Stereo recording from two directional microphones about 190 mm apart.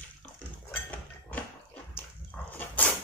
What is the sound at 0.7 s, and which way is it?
Dog, 10° left (ahead or behind).